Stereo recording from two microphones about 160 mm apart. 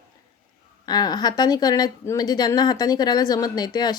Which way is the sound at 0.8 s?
25° left (ahead or behind).